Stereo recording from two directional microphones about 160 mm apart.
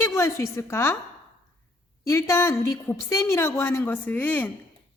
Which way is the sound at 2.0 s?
15° left (ahead or behind).